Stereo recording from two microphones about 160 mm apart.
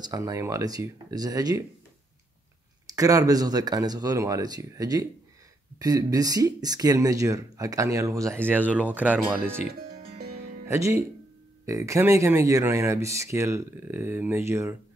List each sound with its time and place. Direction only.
0.0 s speech: 20° right (ahead or behind)
2.9 s speech: 20° right (ahead or behind)
10.1 s music: 70° right (ahead or behind)
10.7 s speech: 15° right (ahead or behind)